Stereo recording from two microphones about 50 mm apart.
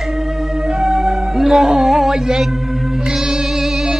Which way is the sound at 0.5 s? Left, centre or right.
Centre.